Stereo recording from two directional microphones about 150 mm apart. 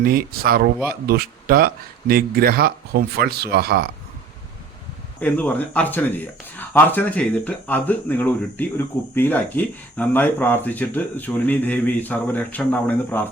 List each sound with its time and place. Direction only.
0.0 s speech: 80° right
5.2 s speech: 10° left (ahead or behind)